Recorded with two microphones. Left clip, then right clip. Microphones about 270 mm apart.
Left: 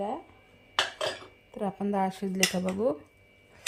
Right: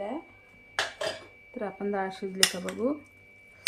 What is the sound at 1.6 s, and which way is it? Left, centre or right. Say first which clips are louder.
Speech: left 2 dB; left.